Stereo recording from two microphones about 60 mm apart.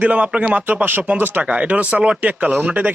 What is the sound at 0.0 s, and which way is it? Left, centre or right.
Speech, right.